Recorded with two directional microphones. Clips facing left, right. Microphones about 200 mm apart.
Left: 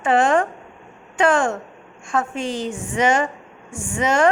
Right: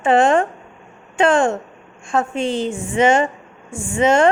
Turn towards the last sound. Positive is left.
turn(degrees=-25)  # may be behind; listen again after turning